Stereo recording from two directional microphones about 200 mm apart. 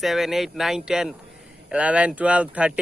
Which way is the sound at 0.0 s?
Centre (ahead or behind).